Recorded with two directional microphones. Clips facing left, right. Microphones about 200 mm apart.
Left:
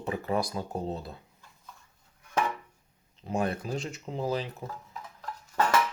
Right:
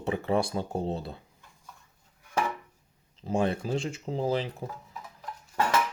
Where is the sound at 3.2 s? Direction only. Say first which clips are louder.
Right 3 dB; 30° right (ahead or behind).